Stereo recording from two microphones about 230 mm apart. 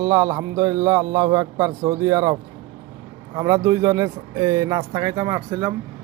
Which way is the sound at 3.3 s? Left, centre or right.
Centre.